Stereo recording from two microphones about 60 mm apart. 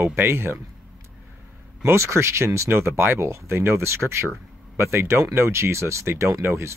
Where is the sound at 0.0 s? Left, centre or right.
Right.